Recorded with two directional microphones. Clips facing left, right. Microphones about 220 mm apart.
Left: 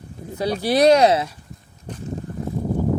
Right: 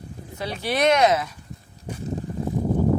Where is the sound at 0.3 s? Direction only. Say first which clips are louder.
Left 6 dB; 35° left (ahead or behind).